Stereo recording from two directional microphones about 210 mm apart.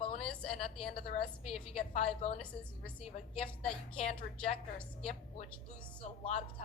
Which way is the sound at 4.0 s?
30° left (ahead or behind).